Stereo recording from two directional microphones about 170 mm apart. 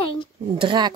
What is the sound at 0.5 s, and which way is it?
Speech, 25° right (ahead or behind).